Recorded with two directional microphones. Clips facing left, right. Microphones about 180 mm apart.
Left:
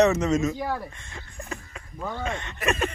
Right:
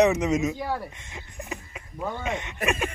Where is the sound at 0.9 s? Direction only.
20° right (ahead or behind).